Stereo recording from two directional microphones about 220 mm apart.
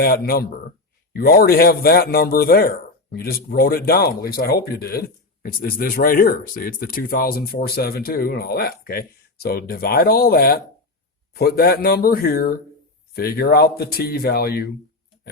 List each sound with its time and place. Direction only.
0.0 s a man's voice: 45° left (ahead or behind)